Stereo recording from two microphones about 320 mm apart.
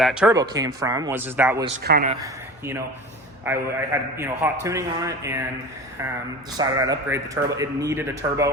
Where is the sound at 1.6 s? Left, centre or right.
Right.